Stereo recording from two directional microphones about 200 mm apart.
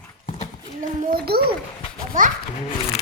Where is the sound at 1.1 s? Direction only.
50° right (ahead or behind).